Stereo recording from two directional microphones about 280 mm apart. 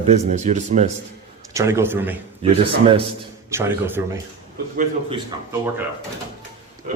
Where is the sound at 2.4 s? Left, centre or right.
Centre.